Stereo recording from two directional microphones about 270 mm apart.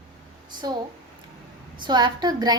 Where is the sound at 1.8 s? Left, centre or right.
Centre.